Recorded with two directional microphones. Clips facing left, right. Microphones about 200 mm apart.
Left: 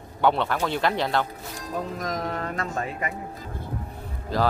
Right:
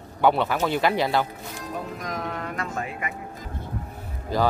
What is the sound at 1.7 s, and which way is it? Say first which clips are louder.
Speech: left 3 dB; 40° left (ahead or behind).